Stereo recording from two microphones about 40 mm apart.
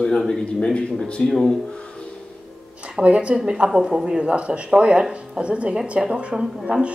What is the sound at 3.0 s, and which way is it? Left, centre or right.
Speech, right.